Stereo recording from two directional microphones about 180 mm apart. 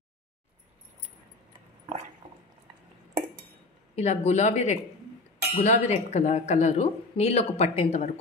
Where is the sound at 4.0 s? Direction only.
40° left (ahead or behind).